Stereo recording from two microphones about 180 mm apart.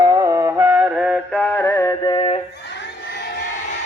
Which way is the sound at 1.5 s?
15° left (ahead or behind).